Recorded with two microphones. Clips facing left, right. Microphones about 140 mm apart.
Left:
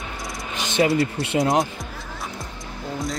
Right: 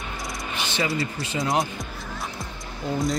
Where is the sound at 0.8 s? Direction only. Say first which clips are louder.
Left 8 dB; centre (ahead or behind).